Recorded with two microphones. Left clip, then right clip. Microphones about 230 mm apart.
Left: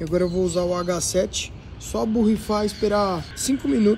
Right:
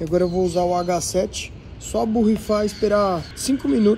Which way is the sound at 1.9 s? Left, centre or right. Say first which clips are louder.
Right 2 dB; centre.